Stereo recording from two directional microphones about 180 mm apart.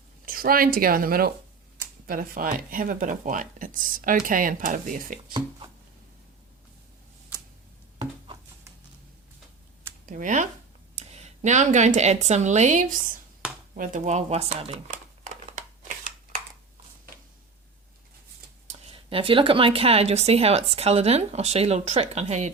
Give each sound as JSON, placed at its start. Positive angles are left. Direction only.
{"t": 0.3, "sound": "speech", "side_deg": -55}
{"t": 5.3, "sound": "a sound", "side_deg": -25}
{"t": 10.1, "sound": "speech", "side_deg": -45}
{"t": 18.7, "sound": "speech", "side_deg": -30}